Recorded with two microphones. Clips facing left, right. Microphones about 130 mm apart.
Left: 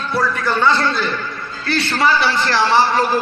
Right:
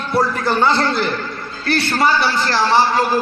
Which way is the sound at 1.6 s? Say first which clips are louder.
Right 2 dB; 50° right (ahead or behind).